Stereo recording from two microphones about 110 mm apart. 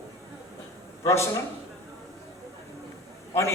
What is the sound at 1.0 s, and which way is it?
Speech, 25° left (ahead or behind).